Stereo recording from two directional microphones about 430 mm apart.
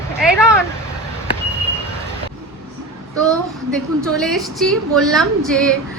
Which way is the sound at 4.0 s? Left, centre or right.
Centre.